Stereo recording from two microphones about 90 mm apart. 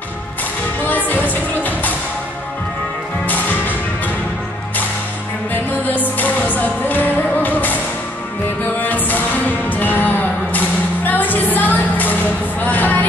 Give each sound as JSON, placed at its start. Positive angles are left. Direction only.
{"t": 0.8, "sound": "music", "side_deg": 20}
{"t": 3.3, "sound": "music", "side_deg": 20}
{"t": 5.5, "sound": "music", "side_deg": 20}
{"t": 8.7, "sound": "music", "side_deg": 20}